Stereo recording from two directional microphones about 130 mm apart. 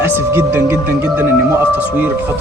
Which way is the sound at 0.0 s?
20° right (ahead or behind).